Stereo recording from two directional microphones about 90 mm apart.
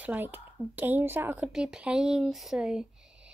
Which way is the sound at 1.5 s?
10° right (ahead or behind).